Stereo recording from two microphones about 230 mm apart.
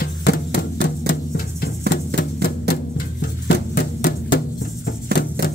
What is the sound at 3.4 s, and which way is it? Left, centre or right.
Music, left.